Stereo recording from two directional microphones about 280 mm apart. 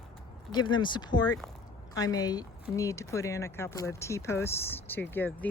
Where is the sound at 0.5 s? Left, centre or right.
Centre.